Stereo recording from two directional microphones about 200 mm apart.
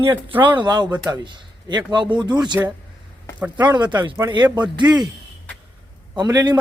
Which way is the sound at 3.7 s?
20° right (ahead or behind).